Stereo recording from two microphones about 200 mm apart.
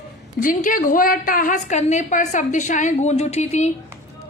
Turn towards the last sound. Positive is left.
turn(degrees=35)  # may be behind; listen again after turning